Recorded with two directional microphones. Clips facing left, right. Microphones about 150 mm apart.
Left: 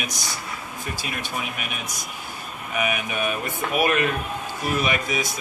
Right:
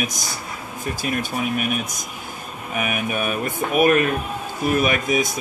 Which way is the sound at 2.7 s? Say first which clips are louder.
Right 1 dB; 45° right (ahead or behind).